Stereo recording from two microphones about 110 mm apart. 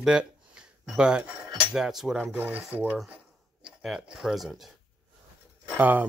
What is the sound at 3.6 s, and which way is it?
Speech, 5° right (ahead or behind).